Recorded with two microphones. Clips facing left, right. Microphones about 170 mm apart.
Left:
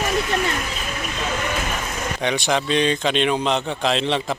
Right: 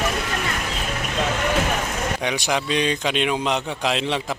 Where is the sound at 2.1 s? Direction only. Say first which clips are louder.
Left 5 dB; 10° right (ahead or behind).